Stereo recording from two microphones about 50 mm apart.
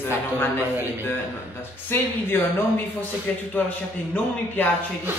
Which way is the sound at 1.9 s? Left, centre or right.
Left.